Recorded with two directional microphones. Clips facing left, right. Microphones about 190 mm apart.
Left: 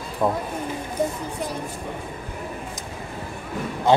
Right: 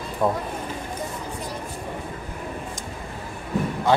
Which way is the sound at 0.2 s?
Centre (ahead or behind).